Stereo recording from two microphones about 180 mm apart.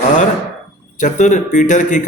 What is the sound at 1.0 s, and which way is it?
A man's voice, 45° left (ahead or behind).